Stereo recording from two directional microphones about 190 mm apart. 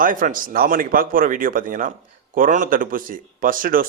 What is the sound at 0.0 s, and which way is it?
Speech, 45° right (ahead or behind).